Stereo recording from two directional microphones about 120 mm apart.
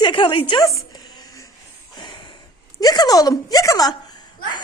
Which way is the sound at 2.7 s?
35° left (ahead or behind).